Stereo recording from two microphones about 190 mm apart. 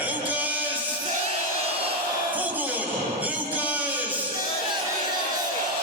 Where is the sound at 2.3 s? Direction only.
10° right (ahead or behind).